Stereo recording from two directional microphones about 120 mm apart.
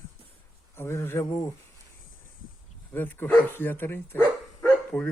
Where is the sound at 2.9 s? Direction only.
15° left (ahead or behind).